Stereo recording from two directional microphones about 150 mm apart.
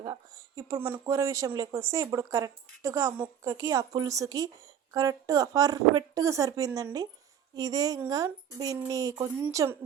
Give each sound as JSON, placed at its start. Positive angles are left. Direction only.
{"t": 0.0, "sound": "speech", "side_deg": -25}